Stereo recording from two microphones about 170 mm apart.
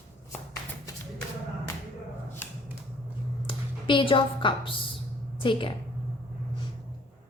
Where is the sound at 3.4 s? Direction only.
30° left (ahead or behind).